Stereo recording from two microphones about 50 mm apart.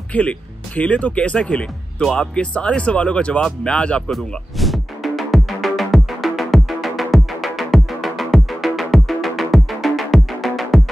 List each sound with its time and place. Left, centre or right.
0.1 s speech: left
4.1 s music: centre